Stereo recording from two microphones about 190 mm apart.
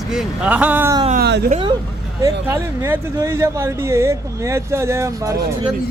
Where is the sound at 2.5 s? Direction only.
15° right (ahead or behind).